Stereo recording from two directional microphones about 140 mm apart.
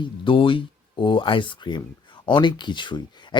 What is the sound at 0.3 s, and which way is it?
Speech, 40° left (ahead or behind).